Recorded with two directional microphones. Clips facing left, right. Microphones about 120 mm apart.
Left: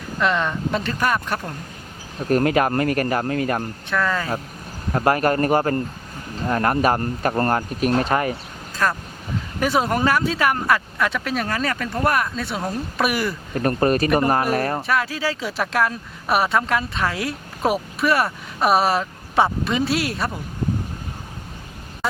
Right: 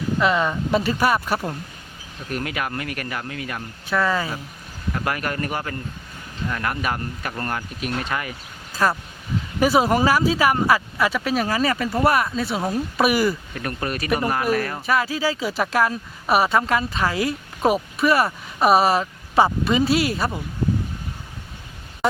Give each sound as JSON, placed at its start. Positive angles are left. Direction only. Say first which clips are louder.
{"t": 0.2, "sound": "speech", "louder": "left 1 dB", "side_deg": -5}
{"t": 2.1, "sound": "speech", "louder": "left 10 dB", "side_deg": 40}
{"t": 3.8, "sound": "speech", "louder": "right 3 dB", "side_deg": -5}
{"t": 4.9, "sound": "speech", "louder": "left 7 dB", "side_deg": 40}
{"t": 8.7, "sound": "a sound", "louder": "right 1 dB", "side_deg": -5}
{"t": 9.6, "sound": "speech", "louder": "right 3 dB", "side_deg": -5}
{"t": 13.5, "sound": "speech", "louder": "left 9 dB", "side_deg": 40}
{"t": 14.8, "sound": "speech", "louder": "right 1 dB", "side_deg": 0}